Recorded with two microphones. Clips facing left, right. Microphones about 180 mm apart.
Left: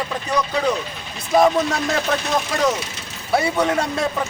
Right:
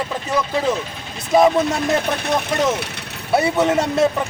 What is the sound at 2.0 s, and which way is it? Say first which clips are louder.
Speech: right 1 dB; 60° right (ahead or behind).